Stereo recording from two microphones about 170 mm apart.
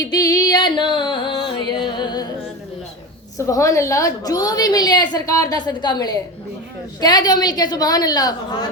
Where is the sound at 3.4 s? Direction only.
20° left (ahead or behind).